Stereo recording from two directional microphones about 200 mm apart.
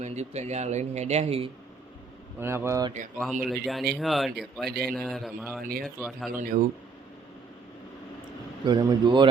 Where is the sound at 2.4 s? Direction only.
10° right (ahead or behind).